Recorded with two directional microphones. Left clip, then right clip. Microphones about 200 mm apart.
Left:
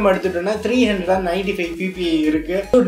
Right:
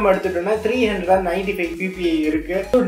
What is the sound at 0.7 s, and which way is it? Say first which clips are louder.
Speech: even; 45° left (ahead or behind).